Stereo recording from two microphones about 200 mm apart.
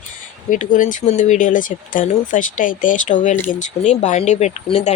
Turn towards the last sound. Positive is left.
turn(degrees=30)  # may be behind; listen again after turning